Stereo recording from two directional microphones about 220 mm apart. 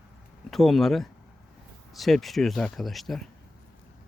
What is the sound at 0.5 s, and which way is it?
Speech, centre (ahead or behind).